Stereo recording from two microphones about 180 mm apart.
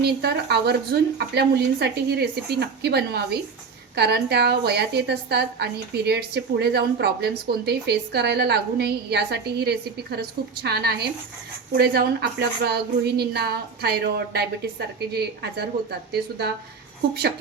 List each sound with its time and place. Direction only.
0.0 s a woman's voice: 65° right (ahead or behind)